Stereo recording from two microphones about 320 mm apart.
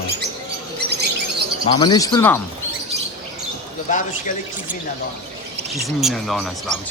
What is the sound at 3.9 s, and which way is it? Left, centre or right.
Speech, left.